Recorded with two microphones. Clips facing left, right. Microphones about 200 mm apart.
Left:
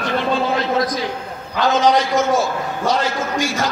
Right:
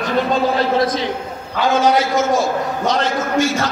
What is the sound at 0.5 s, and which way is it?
Speech, 25° right (ahead or behind).